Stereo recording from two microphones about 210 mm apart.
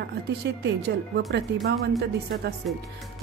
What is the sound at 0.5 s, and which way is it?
A woman's voice, 55° right (ahead or behind).